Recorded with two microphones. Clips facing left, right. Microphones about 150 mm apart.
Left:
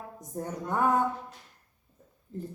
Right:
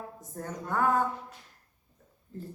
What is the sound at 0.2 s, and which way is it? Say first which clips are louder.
Speech: left 6 dB; 20° left (ahead or behind).